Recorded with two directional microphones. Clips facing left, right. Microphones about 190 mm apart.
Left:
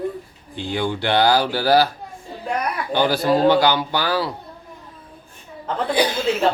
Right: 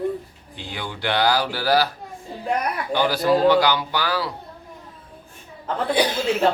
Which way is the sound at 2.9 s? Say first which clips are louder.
Left 1 dB; 30° left (ahead or behind).